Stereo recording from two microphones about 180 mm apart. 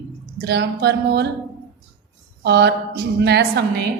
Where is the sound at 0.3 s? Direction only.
65° right (ahead or behind).